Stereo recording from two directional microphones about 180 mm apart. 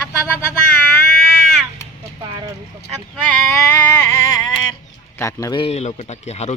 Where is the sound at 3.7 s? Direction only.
15° left (ahead or behind).